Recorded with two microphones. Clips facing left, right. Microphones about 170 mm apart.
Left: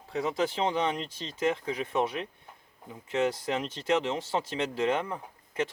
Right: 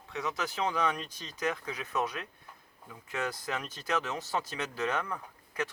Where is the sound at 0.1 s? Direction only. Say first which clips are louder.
Left 6 dB; 30° left (ahead or behind).